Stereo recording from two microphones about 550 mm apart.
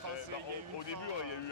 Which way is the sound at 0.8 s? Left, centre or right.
Left.